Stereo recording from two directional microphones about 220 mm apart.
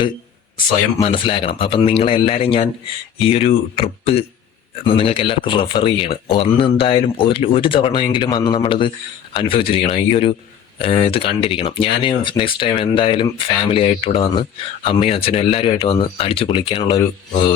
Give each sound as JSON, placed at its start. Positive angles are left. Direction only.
{"t": 1.0, "sound": "speech", "side_deg": 25}